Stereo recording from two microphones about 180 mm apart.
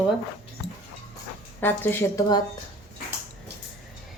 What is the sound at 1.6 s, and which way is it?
Speech, 10° left (ahead or behind).